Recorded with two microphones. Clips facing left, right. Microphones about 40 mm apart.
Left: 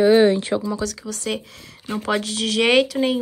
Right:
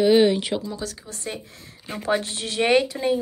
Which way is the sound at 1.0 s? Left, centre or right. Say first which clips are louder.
Left 7 dB; left.